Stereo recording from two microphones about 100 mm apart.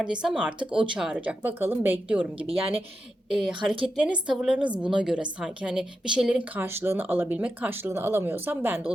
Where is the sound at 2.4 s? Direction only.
70° right (ahead or behind).